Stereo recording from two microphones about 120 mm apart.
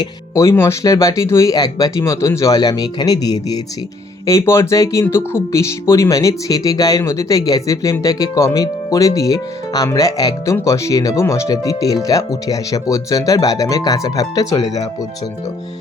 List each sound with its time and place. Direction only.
0.3 s speech: 20° left (ahead or behind)